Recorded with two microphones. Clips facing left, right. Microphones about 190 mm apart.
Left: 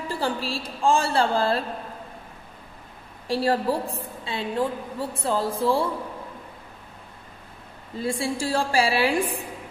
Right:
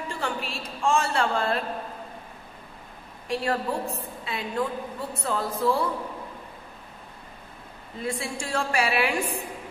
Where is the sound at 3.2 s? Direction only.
35° left (ahead or behind).